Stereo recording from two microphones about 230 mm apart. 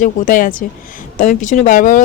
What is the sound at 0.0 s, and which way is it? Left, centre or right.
Speech, left.